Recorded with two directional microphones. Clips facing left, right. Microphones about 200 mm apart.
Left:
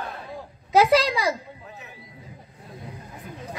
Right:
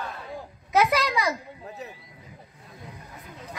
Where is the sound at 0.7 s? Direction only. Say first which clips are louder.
Left 5 dB; 30° left (ahead or behind).